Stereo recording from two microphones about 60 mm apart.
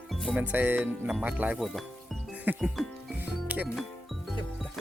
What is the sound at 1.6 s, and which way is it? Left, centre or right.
Speech, centre.